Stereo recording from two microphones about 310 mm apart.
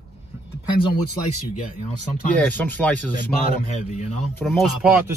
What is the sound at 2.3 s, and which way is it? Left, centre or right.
Speech, centre.